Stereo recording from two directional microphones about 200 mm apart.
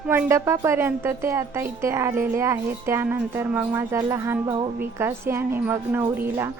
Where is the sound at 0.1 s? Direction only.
10° right (ahead or behind).